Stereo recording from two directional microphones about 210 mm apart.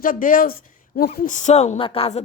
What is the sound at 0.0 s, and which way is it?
Speech, 40° left (ahead or behind).